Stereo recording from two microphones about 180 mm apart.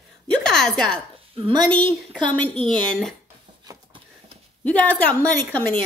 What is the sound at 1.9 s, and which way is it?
Speech, 5° left (ahead or behind).